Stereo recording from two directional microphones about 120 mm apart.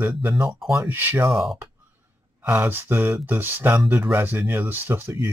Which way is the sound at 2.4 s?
20° right (ahead or behind).